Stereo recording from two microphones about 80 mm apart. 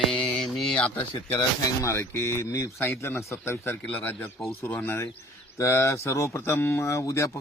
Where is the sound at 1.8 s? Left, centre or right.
Left.